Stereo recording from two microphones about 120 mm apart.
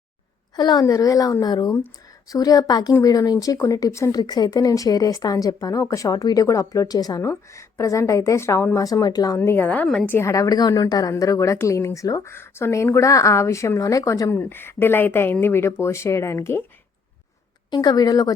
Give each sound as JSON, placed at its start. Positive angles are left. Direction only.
{"t": 0.5, "sound": "a woman's voice", "side_deg": 35}
{"t": 9.8, "sound": "a woman's voice", "side_deg": 5}
{"t": 10.1, "sound": "a woman's voice", "side_deg": 20}
{"t": 17.7, "sound": "speech", "side_deg": 35}